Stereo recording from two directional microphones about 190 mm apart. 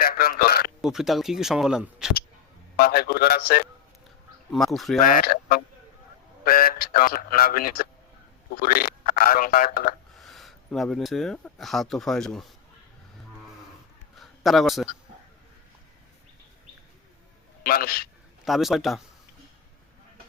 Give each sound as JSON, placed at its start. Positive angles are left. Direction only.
{"t": 0.0, "sound": "a man's voice", "side_deg": 50}
{"t": 0.8, "sound": "speech", "side_deg": 0}
{"t": 2.7, "sound": "speech", "side_deg": 50}
{"t": 4.5, "sound": "speech", "side_deg": 0}
{"t": 4.9, "sound": "speech", "side_deg": 45}
{"t": 10.2, "sound": "speech", "side_deg": 0}
{"t": 14.2, "sound": "a sound", "side_deg": 0}
{"t": 17.6, "sound": "speech", "side_deg": 50}
{"t": 18.4, "sound": "speech", "side_deg": 0}